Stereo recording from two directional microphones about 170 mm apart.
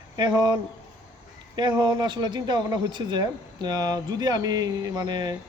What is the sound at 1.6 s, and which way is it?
A man's voice, 25° right (ahead or behind).